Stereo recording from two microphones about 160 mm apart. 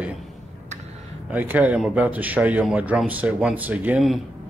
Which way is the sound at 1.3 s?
10° right (ahead or behind).